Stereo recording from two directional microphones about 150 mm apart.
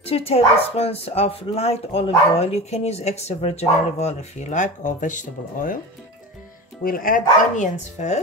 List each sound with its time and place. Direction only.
0.0 s speech: 40° left (ahead or behind); by 5.8 s 60° left (ahead or behind)
6.8 s speech: 70° left (ahead or behind); by 8.2 s 50° left (ahead or behind)